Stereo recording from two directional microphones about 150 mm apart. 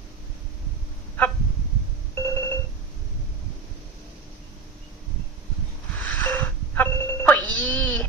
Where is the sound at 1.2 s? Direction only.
10° left (ahead or behind).